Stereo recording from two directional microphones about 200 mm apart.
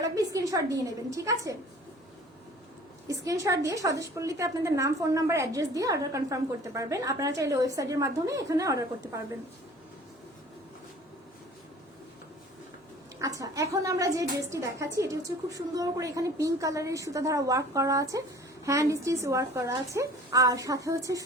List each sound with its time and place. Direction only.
0.2 s a woman's voice: 15° right (ahead or behind)
3.1 s a woman's voice: 15° right (ahead or behind)
13.2 s a woman's voice: 15° right (ahead or behind)